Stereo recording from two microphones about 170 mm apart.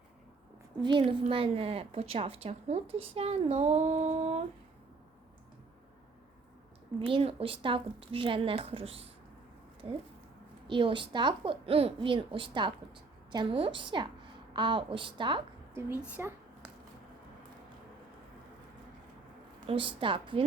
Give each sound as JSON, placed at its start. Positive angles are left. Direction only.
{"t": 0.8, "sound": "a woman's voice", "side_deg": -30}
{"t": 7.0, "sound": "a woman's voice", "side_deg": -35}
{"t": 10.7, "sound": "speech", "side_deg": -30}
{"t": 15.7, "sound": "speech", "side_deg": -10}
{"t": 19.6, "sound": "a woman's voice", "side_deg": -30}